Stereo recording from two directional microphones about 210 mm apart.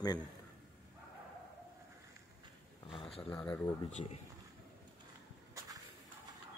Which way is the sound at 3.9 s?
30° left (ahead or behind).